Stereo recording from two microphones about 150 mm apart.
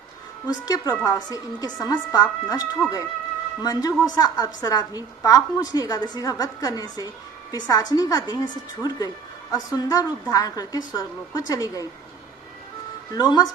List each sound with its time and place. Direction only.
0.4 s a woman's voice: 25° left (ahead or behind)
13.1 s a woman's voice: 25° left (ahead or behind)